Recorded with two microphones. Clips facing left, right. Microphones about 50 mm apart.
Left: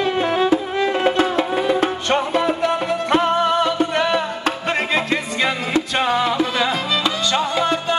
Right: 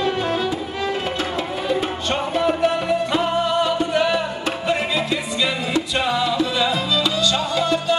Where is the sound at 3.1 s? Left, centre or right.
Left.